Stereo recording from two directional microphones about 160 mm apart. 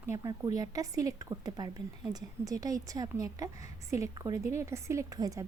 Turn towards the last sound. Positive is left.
turn(degrees=-20)  # may be behind; listen again after turning